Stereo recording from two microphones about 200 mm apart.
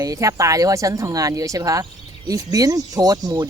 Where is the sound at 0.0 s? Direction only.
15° right (ahead or behind).